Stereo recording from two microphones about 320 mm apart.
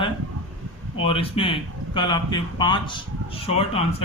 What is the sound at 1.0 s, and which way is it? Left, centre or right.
Speech, centre.